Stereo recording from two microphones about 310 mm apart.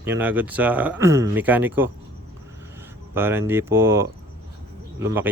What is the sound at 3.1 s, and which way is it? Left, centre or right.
Speech, centre.